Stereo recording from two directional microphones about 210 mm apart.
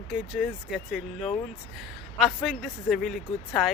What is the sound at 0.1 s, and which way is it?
Speech, 5° right (ahead or behind).